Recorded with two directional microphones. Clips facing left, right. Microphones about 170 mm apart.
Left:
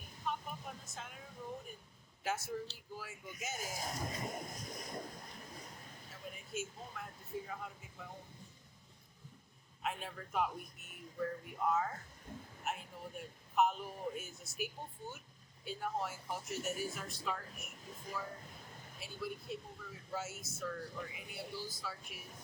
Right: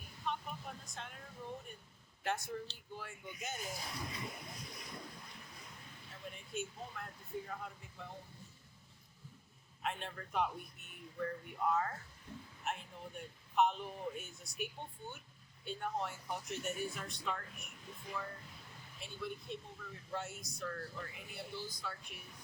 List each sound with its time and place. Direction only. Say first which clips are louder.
0.3 s a sound: even; centre (ahead or behind)
2.2 s speech: even; centre (ahead or behind)
3.6 s speech: left 3 dB; 45° left (ahead or behind)
6.2 s speech: even; centre (ahead or behind)
9.8 s speech: even; 5° left (ahead or behind)
12.3 s a sound: left 1 dB; 50° left (ahead or behind)
12.6 s a man's voice: even; centre (ahead or behind)
17.9 s speech: even; 40° left (ahead or behind)
18.9 s speech: left 1 dB; 5° left (ahead or behind)